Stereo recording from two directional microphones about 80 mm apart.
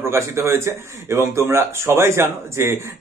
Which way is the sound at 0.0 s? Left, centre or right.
Right.